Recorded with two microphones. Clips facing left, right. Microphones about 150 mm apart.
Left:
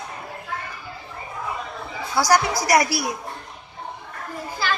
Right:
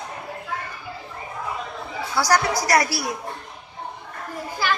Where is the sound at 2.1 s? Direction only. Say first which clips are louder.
Left 1 dB; 15° left (ahead or behind).